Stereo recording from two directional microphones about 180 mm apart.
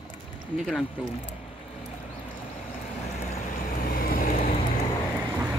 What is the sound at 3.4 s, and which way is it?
Vehicle, 50° left (ahead or behind).